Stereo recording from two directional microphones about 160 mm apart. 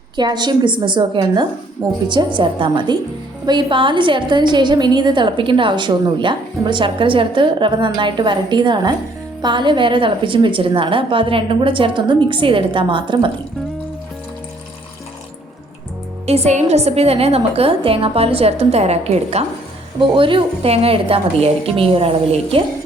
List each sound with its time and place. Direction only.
0.2 s a woman's voice: 25° right (ahead or behind)
16.2 s a woman's voice: 40° right (ahead or behind)